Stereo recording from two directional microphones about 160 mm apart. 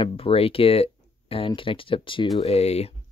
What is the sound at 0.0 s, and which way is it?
Speech, 35° left (ahead or behind).